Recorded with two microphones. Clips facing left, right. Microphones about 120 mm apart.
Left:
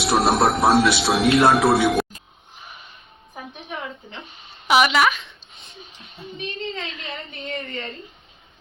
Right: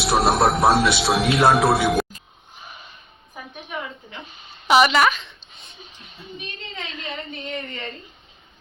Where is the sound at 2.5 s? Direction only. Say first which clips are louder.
Right 1 dB; centre (ahead or behind).